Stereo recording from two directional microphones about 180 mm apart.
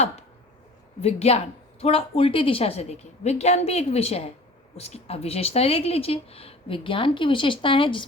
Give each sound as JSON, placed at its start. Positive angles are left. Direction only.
{"t": 1.0, "sound": "speech", "side_deg": 35}